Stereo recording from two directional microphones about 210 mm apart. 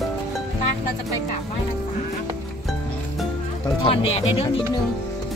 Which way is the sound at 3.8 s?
25° left (ahead or behind).